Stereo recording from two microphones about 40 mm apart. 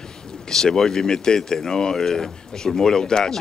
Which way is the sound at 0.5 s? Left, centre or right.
Centre.